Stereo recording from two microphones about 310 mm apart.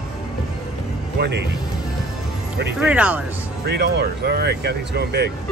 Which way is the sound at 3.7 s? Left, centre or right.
Right.